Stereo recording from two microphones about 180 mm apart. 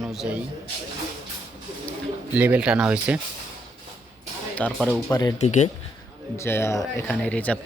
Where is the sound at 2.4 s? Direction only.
10° right (ahead or behind).